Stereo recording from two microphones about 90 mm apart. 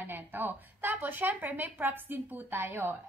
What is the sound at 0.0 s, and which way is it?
A woman's voice, 20° right (ahead or behind).